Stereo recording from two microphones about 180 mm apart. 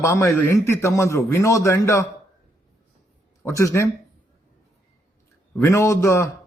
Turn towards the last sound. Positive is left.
turn(degrees=15)  # may be behind; listen again after turning